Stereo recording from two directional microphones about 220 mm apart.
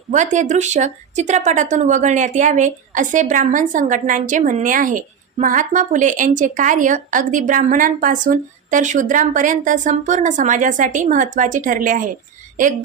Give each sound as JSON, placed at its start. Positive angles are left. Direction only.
{"t": 0.1, "sound": "speech", "side_deg": -35}